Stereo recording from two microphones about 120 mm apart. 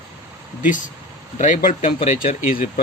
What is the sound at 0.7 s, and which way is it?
Speech, 90° left.